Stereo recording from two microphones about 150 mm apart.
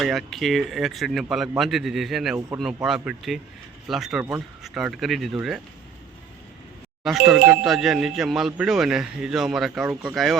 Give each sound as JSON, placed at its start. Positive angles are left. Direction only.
{"t": 0.0, "sound": "speech", "side_deg": 0}
{"t": 4.2, "sound": "speech", "side_deg": -20}
{"t": 4.6, "sound": "speech", "side_deg": -5}
{"t": 7.0, "sound": "speech", "side_deg": 0}